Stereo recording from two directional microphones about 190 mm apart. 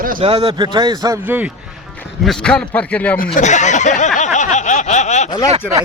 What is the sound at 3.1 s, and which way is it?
Speech, 40° left (ahead or behind).